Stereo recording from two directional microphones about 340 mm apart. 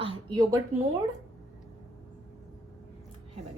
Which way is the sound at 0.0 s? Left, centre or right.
Centre.